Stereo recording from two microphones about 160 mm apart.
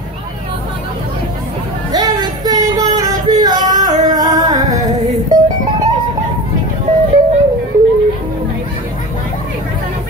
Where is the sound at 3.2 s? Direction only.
25° right (ahead or behind).